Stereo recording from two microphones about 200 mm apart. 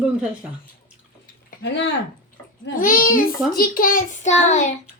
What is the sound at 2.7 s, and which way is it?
Child singing, 40° left (ahead or behind).